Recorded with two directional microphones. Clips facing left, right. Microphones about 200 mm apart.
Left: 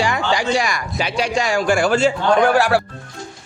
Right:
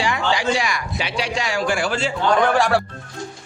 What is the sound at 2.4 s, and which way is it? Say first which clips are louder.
Speech: left 1 dB; 5° left (ahead or behind).